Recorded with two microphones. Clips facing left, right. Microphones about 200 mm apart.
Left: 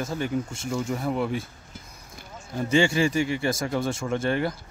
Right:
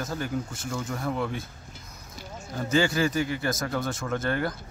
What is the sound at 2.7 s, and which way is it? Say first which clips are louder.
Speech: left 2 dB; 30° left (ahead or behind).